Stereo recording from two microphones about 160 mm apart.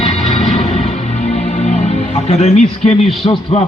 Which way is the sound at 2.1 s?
40° left (ahead or behind).